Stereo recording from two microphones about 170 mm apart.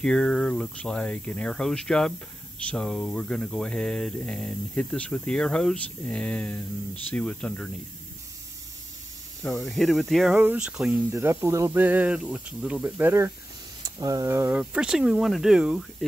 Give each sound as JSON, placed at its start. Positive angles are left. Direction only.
{"t": 0.0, "sound": "speech", "side_deg": 5}
{"t": 9.4, "sound": "speech", "side_deg": 0}
{"t": 14.6, "sound": "speech", "side_deg": -5}